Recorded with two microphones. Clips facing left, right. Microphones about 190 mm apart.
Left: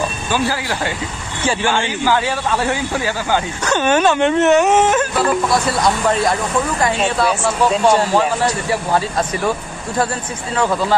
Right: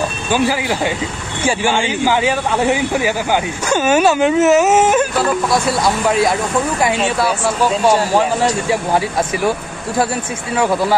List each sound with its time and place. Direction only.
0.3 s speech: 15° right (ahead or behind)
6.0 s speech: 10° right (ahead or behind)
10.5 s speech: 10° right (ahead or behind)